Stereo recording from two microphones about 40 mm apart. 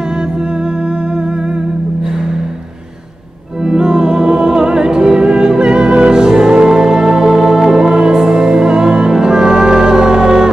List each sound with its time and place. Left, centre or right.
3.6 s music: centre